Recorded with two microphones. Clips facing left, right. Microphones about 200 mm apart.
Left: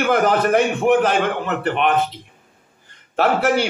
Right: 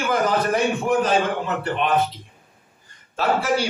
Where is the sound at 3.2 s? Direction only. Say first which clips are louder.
Left 4 dB; 60° left (ahead or behind).